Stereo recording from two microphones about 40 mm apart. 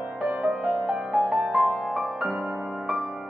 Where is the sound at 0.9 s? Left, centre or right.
Centre.